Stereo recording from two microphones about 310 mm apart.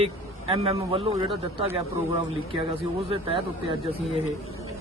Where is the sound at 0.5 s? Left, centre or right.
Centre.